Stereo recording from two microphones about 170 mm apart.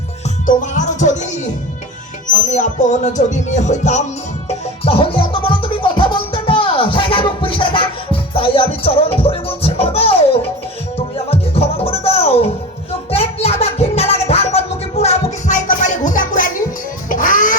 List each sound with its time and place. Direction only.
0.4 s music: 45° left (ahead or behind)
2.5 s music: 45° left (ahead or behind)